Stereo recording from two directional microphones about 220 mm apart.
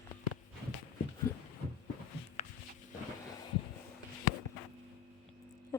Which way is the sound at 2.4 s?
35° left (ahead or behind).